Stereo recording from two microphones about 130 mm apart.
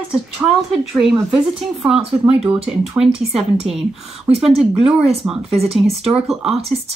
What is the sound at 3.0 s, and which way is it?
Speech, 50° right (ahead or behind).